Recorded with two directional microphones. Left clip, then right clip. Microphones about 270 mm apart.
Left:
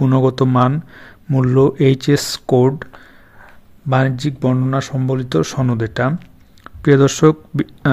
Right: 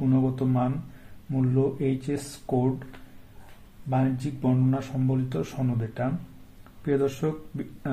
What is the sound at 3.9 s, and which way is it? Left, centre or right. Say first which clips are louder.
Speech: left 10 dB; left.